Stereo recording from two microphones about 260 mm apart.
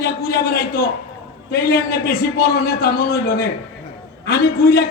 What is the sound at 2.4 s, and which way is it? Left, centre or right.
A man's voice, left.